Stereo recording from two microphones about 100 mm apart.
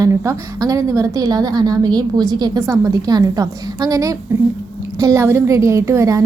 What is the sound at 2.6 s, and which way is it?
A woman's voice, 30° right (ahead or behind).